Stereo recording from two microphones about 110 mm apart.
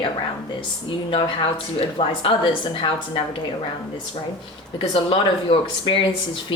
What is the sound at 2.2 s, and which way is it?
Speech, 45° left (ahead or behind).